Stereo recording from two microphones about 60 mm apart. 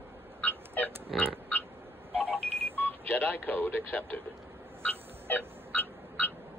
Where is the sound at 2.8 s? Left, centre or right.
Left.